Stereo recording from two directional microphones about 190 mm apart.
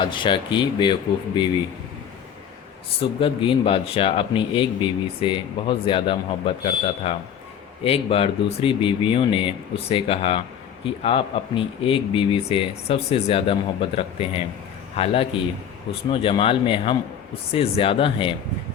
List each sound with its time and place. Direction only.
0.0 s speech: 25° left (ahead or behind)
3.0 s speech: 30° left (ahead or behind)